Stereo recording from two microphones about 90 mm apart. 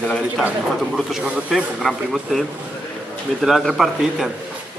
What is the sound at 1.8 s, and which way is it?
Speech, centre (ahead or behind).